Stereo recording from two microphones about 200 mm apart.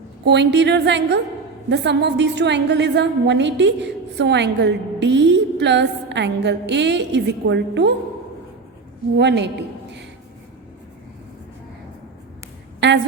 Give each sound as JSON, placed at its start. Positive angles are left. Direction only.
{"t": 0.3, "sound": "a woman's voice", "side_deg": -60}
{"t": 9.1, "sound": "a woman's voice", "side_deg": -60}
{"t": 12.8, "sound": "a sound", "side_deg": -60}